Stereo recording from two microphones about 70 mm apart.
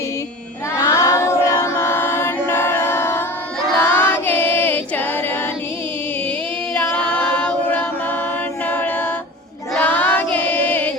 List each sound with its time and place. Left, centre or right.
0.8 s singing: left
1.6 s a capella: left
3.8 s choir: left
7.3 s a capella: centre
9.8 s choir: left